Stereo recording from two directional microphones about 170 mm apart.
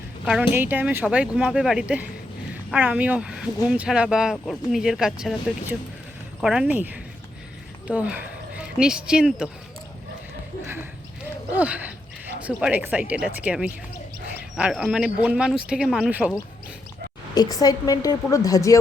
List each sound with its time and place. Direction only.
0.3 s speech: 10° right (ahead or behind)
11.5 s speech: 10° right (ahead or behind)
17.3 s a woman's voice: 20° left (ahead or behind)